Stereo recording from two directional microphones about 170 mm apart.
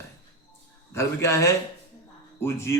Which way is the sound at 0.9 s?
15° left (ahead or behind).